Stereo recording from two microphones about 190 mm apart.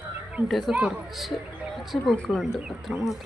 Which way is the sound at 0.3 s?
Centre (ahead or behind).